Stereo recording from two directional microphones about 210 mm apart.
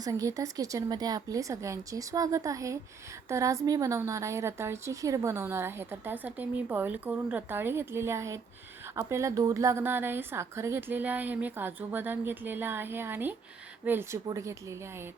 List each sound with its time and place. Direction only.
0.0 s a woman's voice: 15° right (ahead or behind)